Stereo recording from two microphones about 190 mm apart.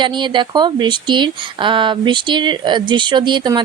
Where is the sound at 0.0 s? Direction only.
25° right (ahead or behind).